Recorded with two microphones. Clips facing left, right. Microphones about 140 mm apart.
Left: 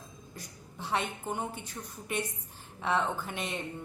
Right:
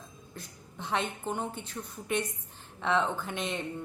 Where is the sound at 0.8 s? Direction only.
10° left (ahead or behind).